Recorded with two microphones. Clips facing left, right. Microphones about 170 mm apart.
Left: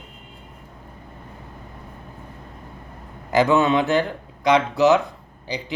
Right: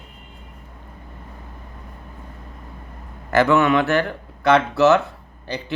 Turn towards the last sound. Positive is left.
turn(degrees=15)  # may be behind; listen again after turning